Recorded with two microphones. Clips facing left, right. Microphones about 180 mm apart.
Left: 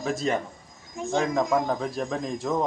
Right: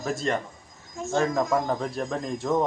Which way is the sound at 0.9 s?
15° left (ahead or behind).